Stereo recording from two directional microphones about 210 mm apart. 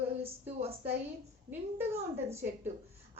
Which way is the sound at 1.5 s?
10° right (ahead or behind).